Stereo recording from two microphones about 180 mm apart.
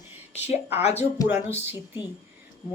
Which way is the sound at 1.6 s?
10° right (ahead or behind).